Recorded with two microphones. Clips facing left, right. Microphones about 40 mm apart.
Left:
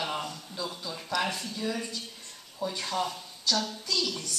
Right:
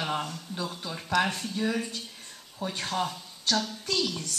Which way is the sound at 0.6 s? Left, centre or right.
Right.